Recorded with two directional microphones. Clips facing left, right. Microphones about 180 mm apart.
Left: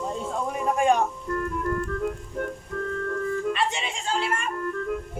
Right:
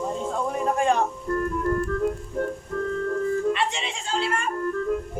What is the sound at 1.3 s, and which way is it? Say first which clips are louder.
Music: right 3 dB; 35° right (ahead or behind).